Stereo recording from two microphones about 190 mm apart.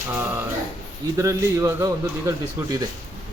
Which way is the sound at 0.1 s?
10° right (ahead or behind).